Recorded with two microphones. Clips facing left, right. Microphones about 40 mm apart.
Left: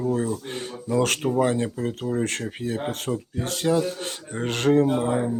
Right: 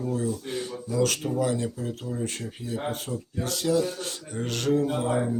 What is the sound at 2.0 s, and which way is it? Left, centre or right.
Speech, left.